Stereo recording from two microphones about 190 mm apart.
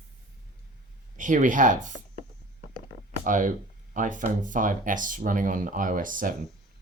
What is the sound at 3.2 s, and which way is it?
Speech, 45° right (ahead or behind).